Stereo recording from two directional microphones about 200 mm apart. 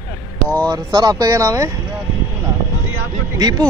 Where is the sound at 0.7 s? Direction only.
20° right (ahead or behind).